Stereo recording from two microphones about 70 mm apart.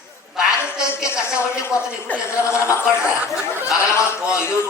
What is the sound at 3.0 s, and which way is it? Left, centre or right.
Speech, centre.